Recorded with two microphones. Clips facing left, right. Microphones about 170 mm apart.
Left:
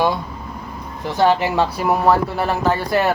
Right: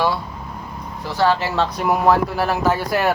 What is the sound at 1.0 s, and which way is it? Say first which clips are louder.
Speech: left 2 dB; 20° left (ahead or behind).